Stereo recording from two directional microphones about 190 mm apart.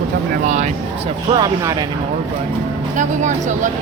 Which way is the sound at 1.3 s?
20° right (ahead or behind).